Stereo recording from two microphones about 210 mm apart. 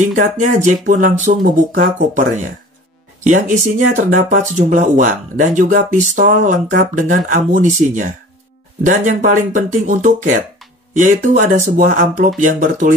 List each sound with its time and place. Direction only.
0.0 s speech: 35° right (ahead or behind)